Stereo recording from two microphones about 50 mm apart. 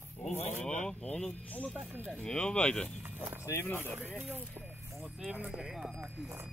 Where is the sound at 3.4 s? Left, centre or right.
Left.